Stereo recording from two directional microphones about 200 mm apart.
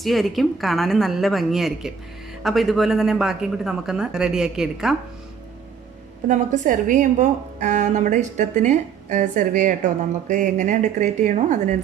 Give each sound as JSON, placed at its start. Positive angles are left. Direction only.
{"t": 0.0, "sound": "a woman's voice", "side_deg": 0}
{"t": 6.2, "sound": "a woman's voice", "side_deg": -40}